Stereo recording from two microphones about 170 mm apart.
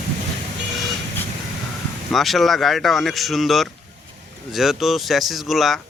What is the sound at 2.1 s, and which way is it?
Speech, centre (ahead or behind).